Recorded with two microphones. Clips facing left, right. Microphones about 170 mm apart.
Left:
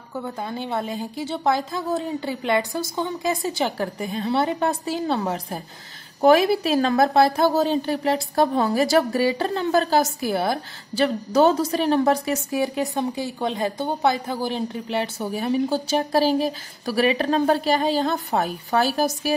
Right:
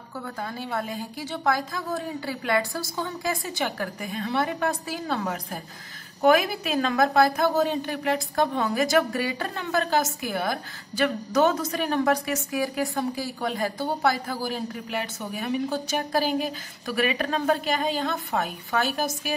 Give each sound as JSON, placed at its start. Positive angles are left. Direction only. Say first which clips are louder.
{"t": 0.2, "sound": "a woman's voice", "louder": "left 4 dB", "side_deg": 20}